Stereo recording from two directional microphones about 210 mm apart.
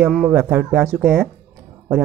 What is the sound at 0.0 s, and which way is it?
Speech, 5° right (ahead or behind).